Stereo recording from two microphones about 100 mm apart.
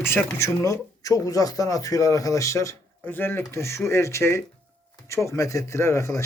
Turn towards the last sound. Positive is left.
turn(degrees=30)  # may be behind; listen again after turning